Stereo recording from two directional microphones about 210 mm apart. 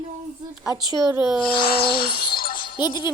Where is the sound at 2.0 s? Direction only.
45° left (ahead or behind).